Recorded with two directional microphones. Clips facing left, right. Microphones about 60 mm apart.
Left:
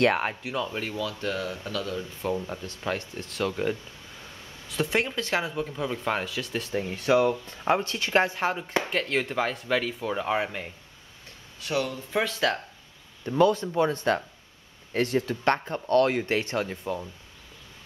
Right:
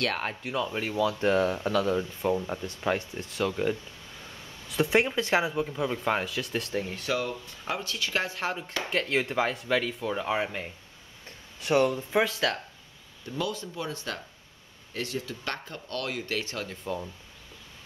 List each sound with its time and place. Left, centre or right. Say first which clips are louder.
0.2 s speech: left 1 dB; centre
1.2 s speech: right 6 dB; right
2.2 s speech: even; centre
7.1 s speech: left 10 dB; left
7.4 s speech: left 8 dB; left
8.4 s speech: left 5 dB; centre
11.6 s speech: right 5 dB; right
12.1 s speech: even; centre
13.2 s speech: left 11 dB; left
16.8 s speech: left 2 dB; centre